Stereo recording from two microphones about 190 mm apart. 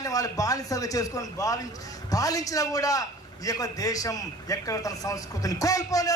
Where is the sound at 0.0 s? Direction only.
20° left (ahead or behind).